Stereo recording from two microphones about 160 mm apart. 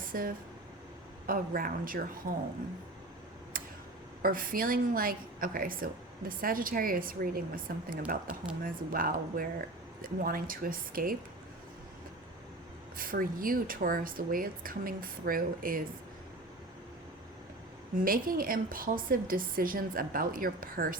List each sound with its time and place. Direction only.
0.1 s a woman's voice: 60° right (ahead or behind)
3.5 s a sound: 60° right (ahead or behind)
4.2 s a woman's voice: 60° right (ahead or behind)
13.0 s a woman's voice: 60° right (ahead or behind)
17.9 s a woman's voice: 60° right (ahead or behind)